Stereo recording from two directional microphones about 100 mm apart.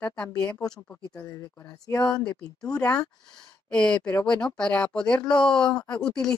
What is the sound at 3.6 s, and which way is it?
Speech, 10° left (ahead or behind).